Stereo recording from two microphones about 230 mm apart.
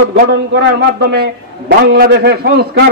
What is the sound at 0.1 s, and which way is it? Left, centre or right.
A man's voice, right.